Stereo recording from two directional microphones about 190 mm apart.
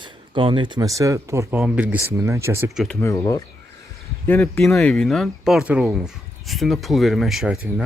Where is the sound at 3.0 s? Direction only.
20° left (ahead or behind).